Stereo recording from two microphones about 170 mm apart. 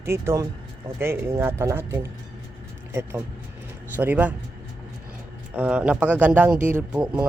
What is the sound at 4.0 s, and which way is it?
Speech, 10° right (ahead or behind).